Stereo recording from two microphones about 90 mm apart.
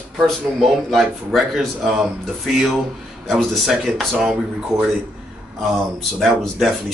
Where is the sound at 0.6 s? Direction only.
Centre (ahead or behind).